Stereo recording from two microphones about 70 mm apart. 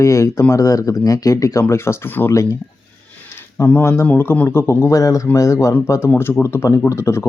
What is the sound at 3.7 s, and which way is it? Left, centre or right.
Speech, left.